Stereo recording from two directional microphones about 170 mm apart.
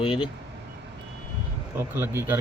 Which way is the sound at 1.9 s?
10° right (ahead or behind).